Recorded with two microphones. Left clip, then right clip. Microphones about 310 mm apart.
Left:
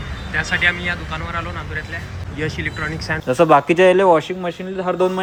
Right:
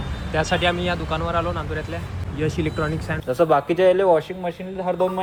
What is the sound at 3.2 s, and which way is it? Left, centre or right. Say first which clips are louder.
A man's voice: left 5 dB; left.